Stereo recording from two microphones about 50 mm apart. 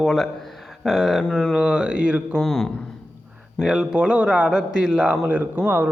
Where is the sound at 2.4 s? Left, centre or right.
Centre.